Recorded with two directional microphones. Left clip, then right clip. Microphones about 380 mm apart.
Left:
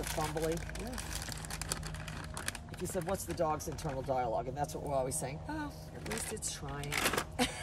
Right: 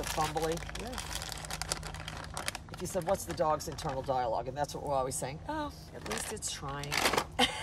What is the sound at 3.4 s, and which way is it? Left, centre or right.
A woman's voice, centre.